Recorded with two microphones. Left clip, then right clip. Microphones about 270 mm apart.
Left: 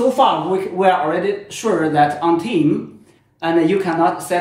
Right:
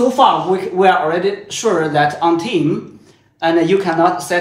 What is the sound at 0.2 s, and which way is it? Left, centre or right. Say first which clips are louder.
Speech: right 3 dB; centre.